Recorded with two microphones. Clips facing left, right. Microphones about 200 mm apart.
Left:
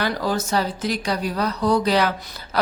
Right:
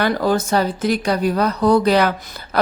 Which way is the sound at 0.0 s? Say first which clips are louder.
Right 5 dB; 55° right (ahead or behind).